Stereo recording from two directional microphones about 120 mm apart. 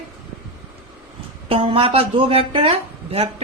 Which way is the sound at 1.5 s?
50° right (ahead or behind).